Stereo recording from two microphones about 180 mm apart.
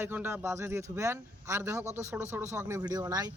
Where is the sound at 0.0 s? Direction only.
10° right (ahead or behind).